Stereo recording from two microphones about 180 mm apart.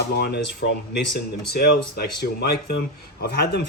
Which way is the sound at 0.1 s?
65° left (ahead or behind).